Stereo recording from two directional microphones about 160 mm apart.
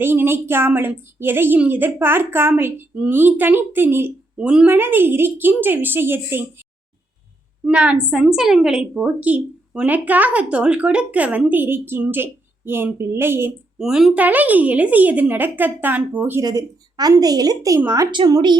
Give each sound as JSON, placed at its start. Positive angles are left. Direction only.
{"t": 0.0, "sound": "a woman's voice", "side_deg": -15}
{"t": 13.7, "sound": "a woman's voice", "side_deg": -5}
{"t": 16.4, "sound": "a woman's voice", "side_deg": -25}